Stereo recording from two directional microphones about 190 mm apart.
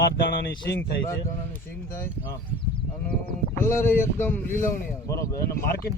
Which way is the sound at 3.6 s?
10° left (ahead or behind).